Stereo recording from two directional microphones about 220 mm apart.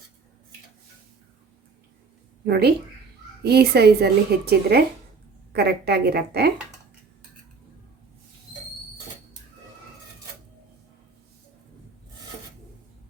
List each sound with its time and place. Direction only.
2.4 s speech: 45° right (ahead or behind)